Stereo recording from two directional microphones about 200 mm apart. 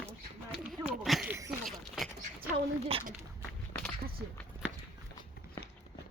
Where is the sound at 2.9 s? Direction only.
30° right (ahead or behind).